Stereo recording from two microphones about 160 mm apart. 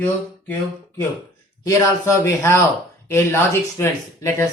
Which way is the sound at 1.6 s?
20° left (ahead or behind).